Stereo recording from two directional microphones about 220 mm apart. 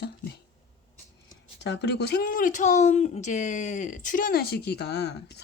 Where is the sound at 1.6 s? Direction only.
50° left (ahead or behind).